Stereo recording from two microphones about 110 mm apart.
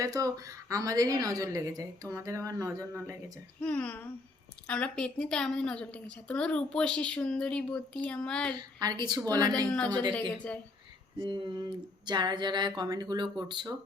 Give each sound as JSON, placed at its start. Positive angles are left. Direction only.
{"t": 0.0, "sound": "a woman's voice", "side_deg": -30}
{"t": 3.6, "sound": "a woman's voice", "side_deg": 10}
{"t": 8.5, "sound": "a woman's voice", "side_deg": -40}
{"t": 9.6, "sound": "a woman's voice", "side_deg": 10}
{"t": 11.2, "sound": "speech", "side_deg": -45}